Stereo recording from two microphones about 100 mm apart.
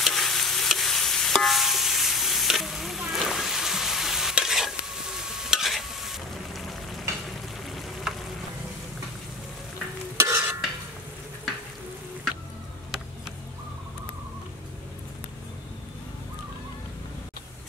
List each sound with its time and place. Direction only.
0.0 s stir: centre (ahead or behind)
7.7 s frying: centre (ahead or behind)
10.1 s stir: 30° right (ahead or behind)